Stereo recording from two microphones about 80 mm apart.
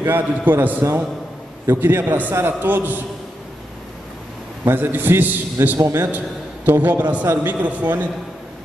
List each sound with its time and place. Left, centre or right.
0.0 s a man's voice: right
4.6 s a man's voice: right
5.8 s a man's voice: right
6.1 s a man's voice: right